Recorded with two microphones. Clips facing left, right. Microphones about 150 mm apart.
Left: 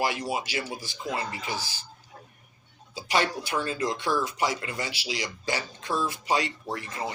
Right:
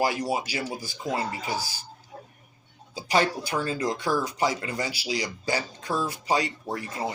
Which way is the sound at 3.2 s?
35° right (ahead or behind).